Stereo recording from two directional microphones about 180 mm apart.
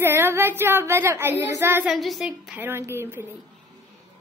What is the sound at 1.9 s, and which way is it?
A woman's voice, centre (ahead or behind).